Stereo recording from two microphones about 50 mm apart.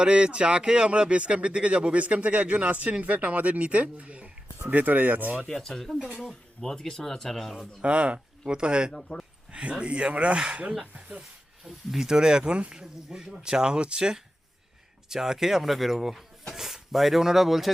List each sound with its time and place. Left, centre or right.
0.0 s speech: right
4.6 s speech: right
5.5 s speech: centre
6.1 s speech: centre
6.6 s speech: centre
7.8 s speech: right
8.9 s speech: centre
9.5 s speech: right
11.6 s speech: centre